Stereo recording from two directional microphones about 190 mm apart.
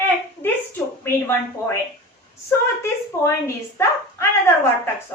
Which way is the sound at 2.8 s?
15° left (ahead or behind).